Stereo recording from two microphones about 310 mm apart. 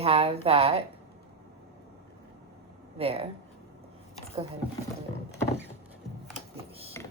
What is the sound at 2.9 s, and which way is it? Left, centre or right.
Speech, centre.